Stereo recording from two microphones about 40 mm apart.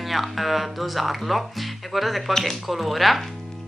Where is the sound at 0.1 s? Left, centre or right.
Centre.